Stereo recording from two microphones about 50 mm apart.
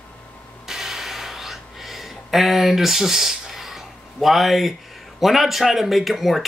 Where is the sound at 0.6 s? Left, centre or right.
Centre.